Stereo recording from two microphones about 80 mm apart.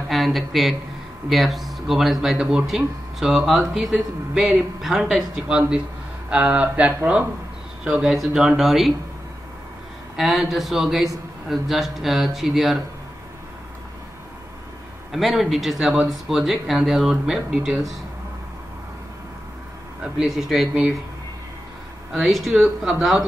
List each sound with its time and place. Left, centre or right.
0.1 s speech: centre
7.8 s speech: centre
10.1 s speech: centre
15.1 s speech: centre
20.0 s speech: centre
22.1 s speech: centre